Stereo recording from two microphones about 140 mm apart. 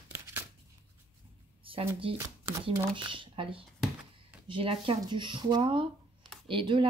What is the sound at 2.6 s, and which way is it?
Speech, 40° right (ahead or behind).